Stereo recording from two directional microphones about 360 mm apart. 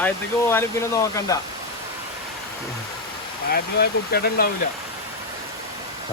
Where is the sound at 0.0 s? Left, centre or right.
Centre.